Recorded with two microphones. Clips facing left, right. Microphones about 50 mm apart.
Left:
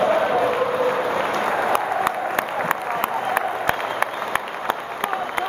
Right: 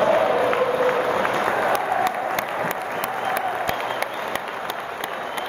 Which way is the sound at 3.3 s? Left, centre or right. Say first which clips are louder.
Left 2 dB; left.